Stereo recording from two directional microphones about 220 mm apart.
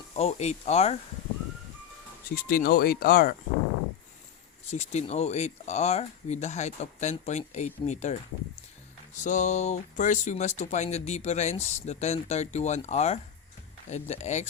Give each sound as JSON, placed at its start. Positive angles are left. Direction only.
{"t": 0.1, "sound": "speech", "side_deg": 30}
{"t": 2.3, "sound": "speech", "side_deg": 40}
{"t": 4.7, "sound": "speech", "side_deg": 30}
{"t": 9.2, "sound": "speech", "side_deg": 35}